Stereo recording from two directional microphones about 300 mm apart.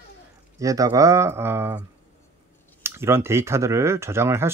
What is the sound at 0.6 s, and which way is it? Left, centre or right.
Speech, centre.